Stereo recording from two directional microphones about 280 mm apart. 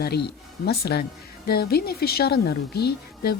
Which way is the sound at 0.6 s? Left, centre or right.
Left.